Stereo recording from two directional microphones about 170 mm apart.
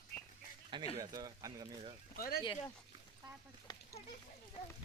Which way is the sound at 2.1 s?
60° left (ahead or behind).